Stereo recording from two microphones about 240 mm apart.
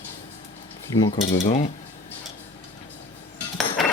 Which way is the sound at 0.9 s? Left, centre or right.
Centre.